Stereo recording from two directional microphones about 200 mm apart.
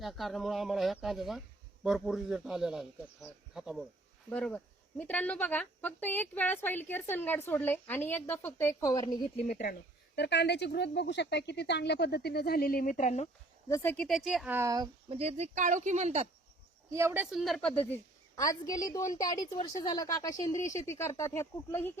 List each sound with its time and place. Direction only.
0.0 s a man's voice: centre (ahead or behind); by 9.1 s 20° left (ahead or behind)
10.2 s speech: 60° left (ahead or behind); by 13.2 s 35° left (ahead or behind)
13.7 s speech: 15° left (ahead or behind)
13.9 s a man's voice: centre (ahead or behind); by 15.2 s 20° right (ahead or behind)
15.2 s speech: 35° right (ahead or behind)
16.9 s speech: 15° right (ahead or behind)
17.3 s a man's voice: centre (ahead or behind)
18.3 s speech: 15° left (ahead or behind)